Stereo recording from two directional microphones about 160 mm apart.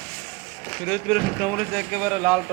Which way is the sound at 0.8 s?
Centre (ahead or behind).